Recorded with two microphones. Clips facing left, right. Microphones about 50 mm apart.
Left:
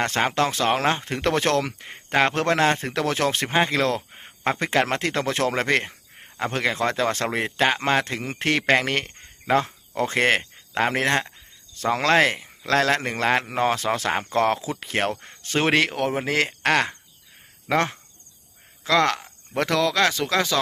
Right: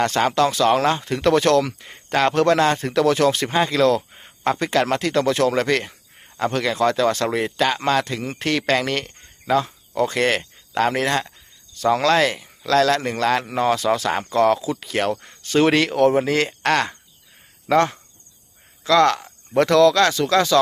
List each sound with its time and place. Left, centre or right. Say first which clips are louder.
0.0 s speech: right 4 dB; left
9.5 s speech: right 1 dB; left; by 16.9 s centre
18.9 s speech: right 4 dB; centre